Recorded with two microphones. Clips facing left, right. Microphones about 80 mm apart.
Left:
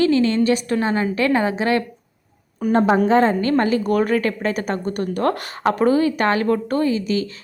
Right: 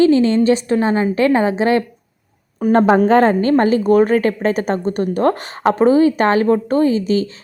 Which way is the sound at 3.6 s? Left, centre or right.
Right.